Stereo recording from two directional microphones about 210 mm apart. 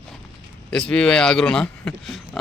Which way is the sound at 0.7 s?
5° left (ahead or behind).